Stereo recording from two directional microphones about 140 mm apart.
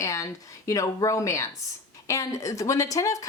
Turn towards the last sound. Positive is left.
turn(degrees=25)  # may be behind; listen again after turning